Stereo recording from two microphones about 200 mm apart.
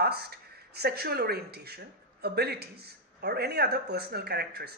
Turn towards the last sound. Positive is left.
turn(degrees=-55)  # may be behind; listen again after turning